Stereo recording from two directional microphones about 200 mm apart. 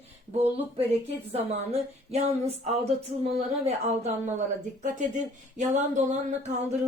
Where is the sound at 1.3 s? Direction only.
30° right (ahead or behind).